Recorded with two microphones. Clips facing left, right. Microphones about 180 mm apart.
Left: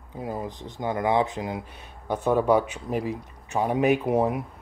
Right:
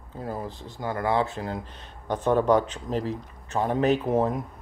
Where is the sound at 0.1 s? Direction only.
15° left (ahead or behind).